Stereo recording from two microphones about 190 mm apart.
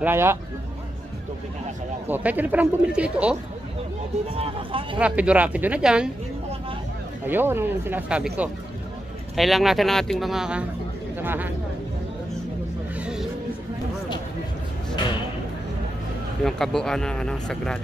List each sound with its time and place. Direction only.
0.0 s speech: 10° right (ahead or behind)
2.0 s speech: 10° right (ahead or behind)
4.4 s speech: 30° right (ahead or behind)
4.9 s speech: 5° right (ahead or behind)
7.2 s speech: 10° right (ahead or behind)
13.0 s music: 5° right (ahead or behind)
16.4 s speech: centre (ahead or behind)